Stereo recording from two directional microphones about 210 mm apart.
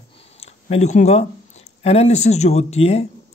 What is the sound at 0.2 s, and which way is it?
Speech, 30° left (ahead or behind).